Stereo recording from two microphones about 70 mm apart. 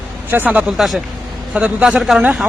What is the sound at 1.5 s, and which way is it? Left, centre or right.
Speech, centre.